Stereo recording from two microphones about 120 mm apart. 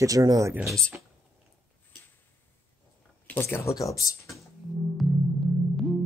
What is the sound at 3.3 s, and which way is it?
Speech, 20° left (ahead or behind).